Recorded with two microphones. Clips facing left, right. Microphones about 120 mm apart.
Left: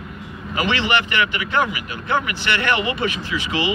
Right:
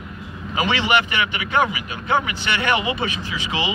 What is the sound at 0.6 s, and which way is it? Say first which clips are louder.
Speech: right 1 dB; 15° right (ahead or behind).